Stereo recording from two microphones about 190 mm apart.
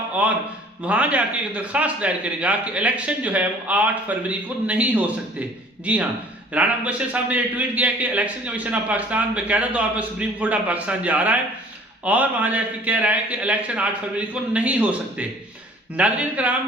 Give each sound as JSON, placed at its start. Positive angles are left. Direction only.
{"t": 0.2, "sound": "a man's voice", "side_deg": -10}